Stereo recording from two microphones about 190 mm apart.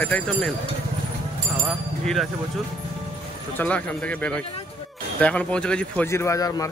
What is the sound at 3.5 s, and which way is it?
Speech, 5° left (ahead or behind).